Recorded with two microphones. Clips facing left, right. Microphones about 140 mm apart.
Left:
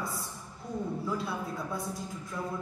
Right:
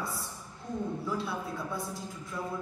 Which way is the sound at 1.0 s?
Centre (ahead or behind).